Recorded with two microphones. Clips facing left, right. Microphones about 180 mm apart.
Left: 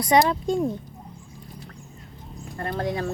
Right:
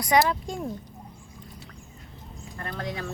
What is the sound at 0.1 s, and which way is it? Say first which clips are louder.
Speech: left 3 dB; 25° left (ahead or behind).